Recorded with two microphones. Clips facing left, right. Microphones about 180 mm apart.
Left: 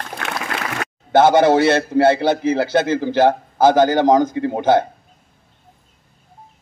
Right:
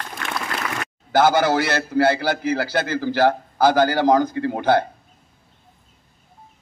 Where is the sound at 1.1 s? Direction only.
25° left (ahead or behind).